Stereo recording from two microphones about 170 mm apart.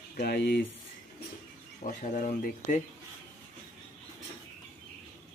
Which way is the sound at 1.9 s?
50° left (ahead or behind).